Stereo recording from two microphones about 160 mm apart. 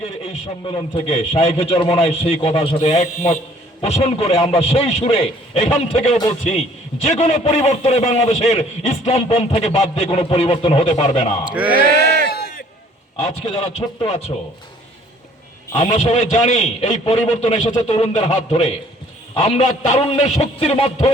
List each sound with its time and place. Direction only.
0.0 s a man's voice: 40° left (ahead or behind)
11.4 s speech: 10° right (ahead or behind)
13.2 s a man's voice: 35° left (ahead or behind)
15.8 s a man's voice: 45° left (ahead or behind)